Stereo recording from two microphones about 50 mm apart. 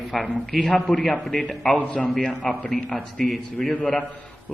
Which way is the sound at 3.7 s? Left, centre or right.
Left.